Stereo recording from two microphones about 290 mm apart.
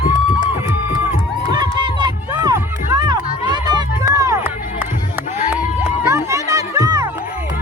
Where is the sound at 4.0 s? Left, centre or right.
Centre.